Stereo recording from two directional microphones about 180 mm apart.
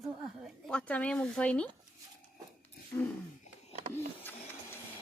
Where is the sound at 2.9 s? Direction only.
10° left (ahead or behind).